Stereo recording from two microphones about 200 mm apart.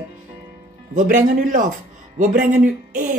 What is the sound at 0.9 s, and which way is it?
Speech, 40° right (ahead or behind).